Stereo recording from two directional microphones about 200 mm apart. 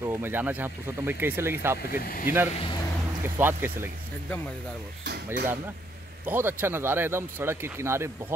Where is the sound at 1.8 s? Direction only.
45° left (ahead or behind).